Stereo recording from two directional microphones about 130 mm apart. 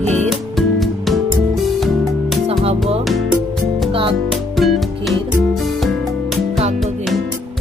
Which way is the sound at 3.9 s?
45° right (ahead or behind).